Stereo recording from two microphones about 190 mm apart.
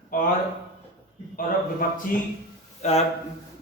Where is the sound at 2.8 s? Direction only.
35° left (ahead or behind).